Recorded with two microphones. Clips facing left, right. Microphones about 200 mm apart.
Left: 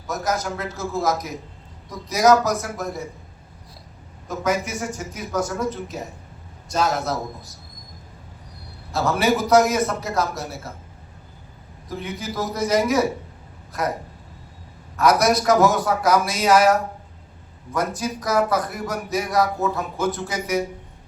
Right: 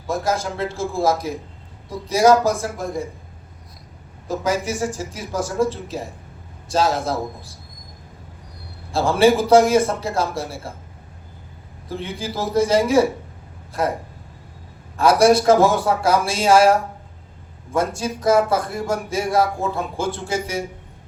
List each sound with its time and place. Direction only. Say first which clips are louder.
0.1 s a man's voice: right 3 dB; 30° right (ahead or behind)
4.3 s a man's voice: right 2 dB; 30° right (ahead or behind)
8.9 s a man's voice: right 5 dB; 30° right (ahead or behind)
11.9 s a man's voice: right 2 dB; 30° right (ahead or behind)
14.9 s a man's voice: right 4 dB; 30° right (ahead or behind)